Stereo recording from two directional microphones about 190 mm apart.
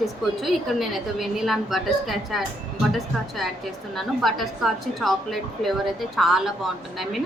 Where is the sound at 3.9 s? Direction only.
Centre (ahead or behind).